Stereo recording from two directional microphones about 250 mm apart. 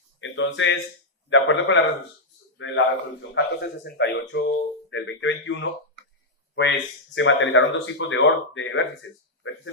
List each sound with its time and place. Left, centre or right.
0.2 s speech: left